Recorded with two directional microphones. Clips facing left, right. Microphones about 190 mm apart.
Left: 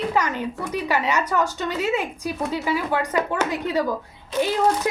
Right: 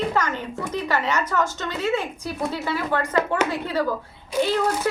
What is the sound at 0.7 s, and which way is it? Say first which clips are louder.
A woman's voice: left 1 dB; 15° left (ahead or behind).